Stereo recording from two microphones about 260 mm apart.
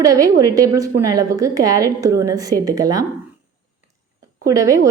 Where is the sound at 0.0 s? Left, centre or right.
Centre.